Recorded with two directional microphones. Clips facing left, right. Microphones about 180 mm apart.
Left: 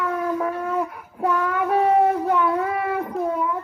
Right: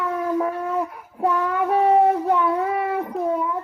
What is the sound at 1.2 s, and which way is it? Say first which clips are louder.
Child singing: right 1 dB; 25° right (ahead or behind).